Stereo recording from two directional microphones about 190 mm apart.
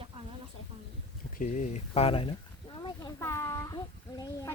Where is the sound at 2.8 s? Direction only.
25° left (ahead or behind).